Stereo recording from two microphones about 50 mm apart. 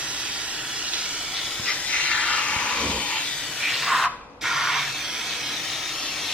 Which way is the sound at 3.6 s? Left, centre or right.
Centre.